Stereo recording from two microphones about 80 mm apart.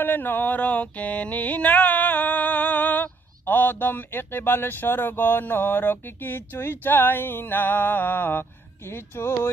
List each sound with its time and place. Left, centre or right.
0.0 s mantra: left
3.4 s speech: left